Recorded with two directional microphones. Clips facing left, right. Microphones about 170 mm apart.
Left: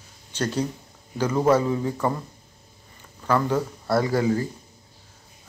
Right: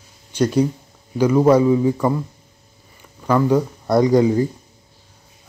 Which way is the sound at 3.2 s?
15° right (ahead or behind).